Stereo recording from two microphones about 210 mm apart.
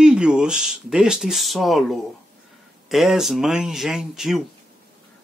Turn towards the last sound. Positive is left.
turn(degrees=0)  # may be behind; listen again after turning